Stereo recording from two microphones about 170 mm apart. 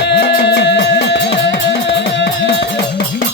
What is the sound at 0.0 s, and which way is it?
Music, 85° left.